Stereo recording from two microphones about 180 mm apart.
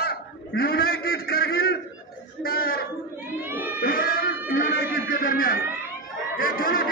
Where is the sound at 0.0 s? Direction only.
60° left (ahead or behind).